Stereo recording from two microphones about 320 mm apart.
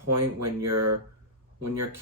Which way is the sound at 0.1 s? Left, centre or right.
Right.